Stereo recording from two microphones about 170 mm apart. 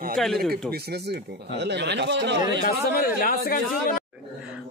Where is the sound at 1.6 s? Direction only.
85° right.